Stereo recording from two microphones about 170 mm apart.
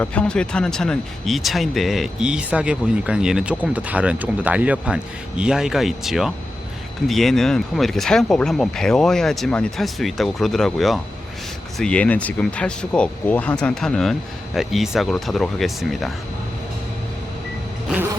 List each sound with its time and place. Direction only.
0.0 s speech: 5° left (ahead or behind)